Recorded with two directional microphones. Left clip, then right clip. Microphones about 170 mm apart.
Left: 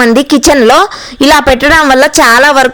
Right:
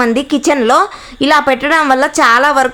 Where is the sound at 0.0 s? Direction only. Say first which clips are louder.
Left 7 dB; 35° left (ahead or behind).